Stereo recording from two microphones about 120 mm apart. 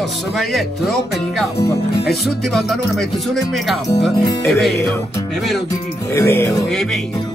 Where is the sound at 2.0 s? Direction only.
Centre (ahead or behind).